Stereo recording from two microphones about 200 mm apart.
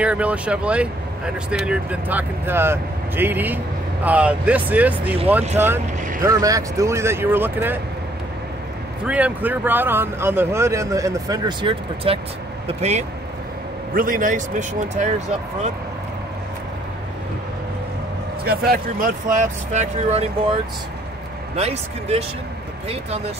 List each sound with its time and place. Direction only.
0.0 s speech: 5° right (ahead or behind)
9.0 s speech: 5° right (ahead or behind); by 13.0 s 35° right (ahead or behind)
13.9 s speech: 45° right (ahead or behind)
18.4 s speech: 50° right (ahead or behind); by 20.5 s 30° right (ahead or behind)
21.5 s speech: 30° right (ahead or behind)